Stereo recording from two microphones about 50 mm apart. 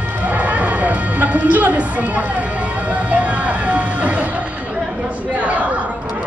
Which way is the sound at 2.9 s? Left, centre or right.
Right.